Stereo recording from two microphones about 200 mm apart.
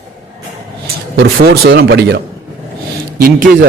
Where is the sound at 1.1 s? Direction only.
50° right (ahead or behind).